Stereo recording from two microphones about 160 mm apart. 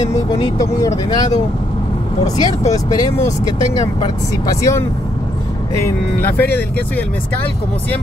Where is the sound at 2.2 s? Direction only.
45° left (ahead or behind).